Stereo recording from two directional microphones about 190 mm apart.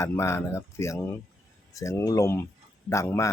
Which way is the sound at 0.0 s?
15° left (ahead or behind).